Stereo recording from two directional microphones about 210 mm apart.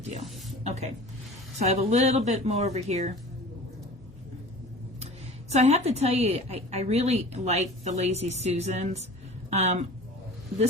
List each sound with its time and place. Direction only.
0.6 s a woman's voice: 30° right (ahead or behind)
5.5 s a woman's voice: 30° right (ahead or behind)